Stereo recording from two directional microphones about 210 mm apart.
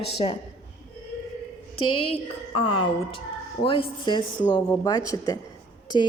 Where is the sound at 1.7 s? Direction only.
90° left.